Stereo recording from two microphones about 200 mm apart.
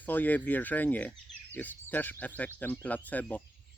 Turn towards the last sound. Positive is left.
turn(degrees=10)  # may be behind; listen again after turning